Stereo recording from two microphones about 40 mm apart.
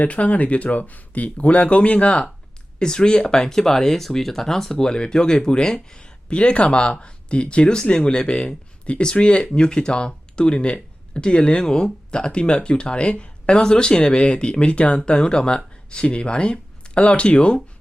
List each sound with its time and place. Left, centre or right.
0.0 s speech: left